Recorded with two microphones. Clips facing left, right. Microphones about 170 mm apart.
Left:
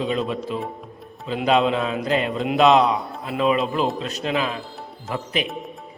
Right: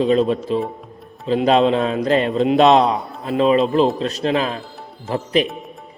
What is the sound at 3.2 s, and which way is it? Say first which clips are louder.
A man's voice: right 6 dB; 35° right (ahead or behind).